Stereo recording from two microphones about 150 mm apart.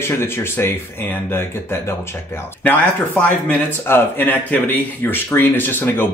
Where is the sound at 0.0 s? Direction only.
15° left (ahead or behind).